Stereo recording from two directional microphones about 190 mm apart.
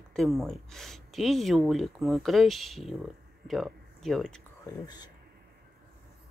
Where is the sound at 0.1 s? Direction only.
Centre (ahead or behind).